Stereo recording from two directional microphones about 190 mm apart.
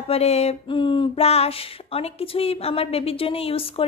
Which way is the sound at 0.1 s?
35° left (ahead or behind).